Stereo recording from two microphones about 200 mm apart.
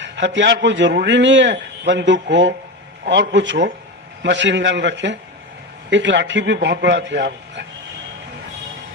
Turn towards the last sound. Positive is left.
turn(degrees=-60)  # may be behind; listen again after turning